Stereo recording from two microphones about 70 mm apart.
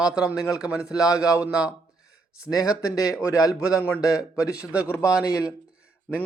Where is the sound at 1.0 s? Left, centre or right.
Left.